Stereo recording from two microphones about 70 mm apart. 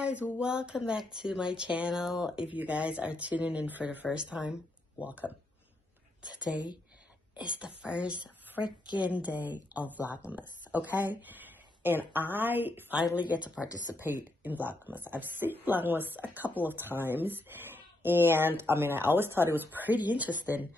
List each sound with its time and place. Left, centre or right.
0.0 s speech: centre
2.5 s speech: centre
7.3 s speech: centre
8.6 s a woman's voice: left
9.0 s speech: right